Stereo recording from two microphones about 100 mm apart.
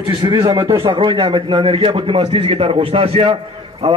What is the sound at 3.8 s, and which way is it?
Speech, 90° right.